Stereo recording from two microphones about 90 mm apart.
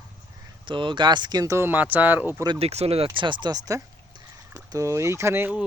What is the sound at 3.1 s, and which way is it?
Speech, 65° right (ahead or behind).